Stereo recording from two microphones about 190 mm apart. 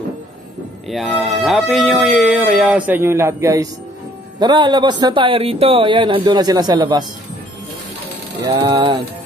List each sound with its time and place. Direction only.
0.8 s a man's voice: 5° left (ahead or behind); by 7.1 s 20° right (ahead or behind)
8.5 s a man's voice: 20° right (ahead or behind)